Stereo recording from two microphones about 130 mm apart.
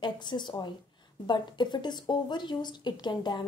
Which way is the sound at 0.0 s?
35° left (ahead or behind).